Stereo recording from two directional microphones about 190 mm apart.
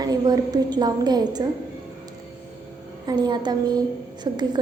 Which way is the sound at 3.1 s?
25° right (ahead or behind).